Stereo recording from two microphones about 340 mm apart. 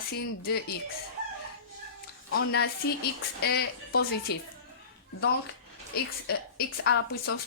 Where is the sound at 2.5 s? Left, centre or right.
Left.